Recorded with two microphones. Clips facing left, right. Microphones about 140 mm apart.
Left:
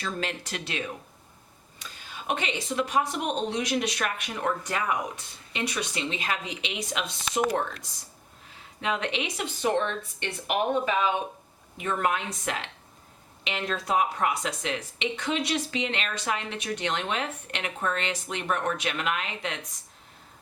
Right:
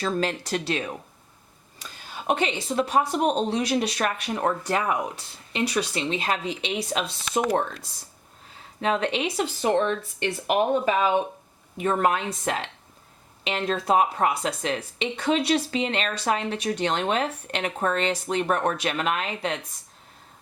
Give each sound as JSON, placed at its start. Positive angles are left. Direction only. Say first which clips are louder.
{"t": 0.0, "sound": "speech", "louder": "right 7 dB", "side_deg": -35}
{"t": 2.2, "sound": "speech", "louder": "right 5 dB", "side_deg": -35}